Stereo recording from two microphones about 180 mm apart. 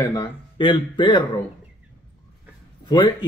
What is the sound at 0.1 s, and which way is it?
Speech, 25° left (ahead or behind).